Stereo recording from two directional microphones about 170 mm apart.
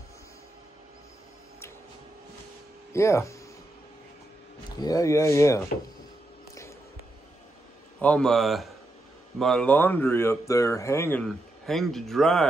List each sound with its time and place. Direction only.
2.9 s speech: 15° left (ahead or behind)
4.6 s speech: 25° left (ahead or behind)
8.0 s speech: 5° left (ahead or behind)
11.2 s speech: centre (ahead or behind)